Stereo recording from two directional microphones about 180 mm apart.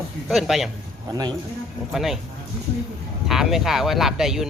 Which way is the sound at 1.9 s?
Centre (ahead or behind).